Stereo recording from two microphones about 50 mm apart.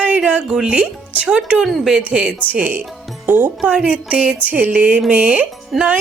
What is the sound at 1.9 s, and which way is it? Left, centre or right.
Speech, right.